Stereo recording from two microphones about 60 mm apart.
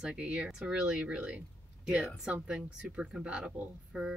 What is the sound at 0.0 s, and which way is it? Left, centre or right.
A woman's voice, centre.